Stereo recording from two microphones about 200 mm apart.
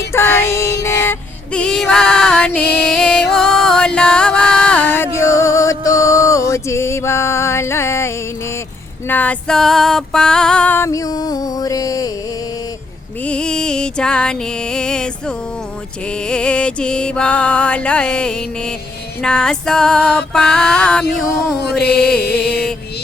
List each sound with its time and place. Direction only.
0.1 s music: 10° left (ahead or behind)
13.2 s music: 5° left (ahead or behind)
22.2 s music: 55° left (ahead or behind)